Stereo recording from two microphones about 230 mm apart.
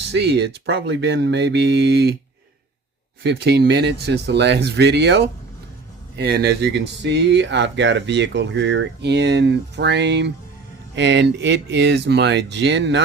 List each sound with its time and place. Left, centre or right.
0.1 s speech: right
3.2 s speech: right